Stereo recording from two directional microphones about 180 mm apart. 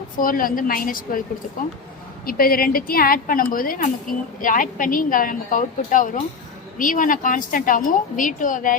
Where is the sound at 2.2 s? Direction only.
55° left (ahead or behind).